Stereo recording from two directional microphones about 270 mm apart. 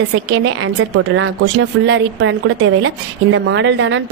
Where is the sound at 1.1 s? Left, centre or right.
Right.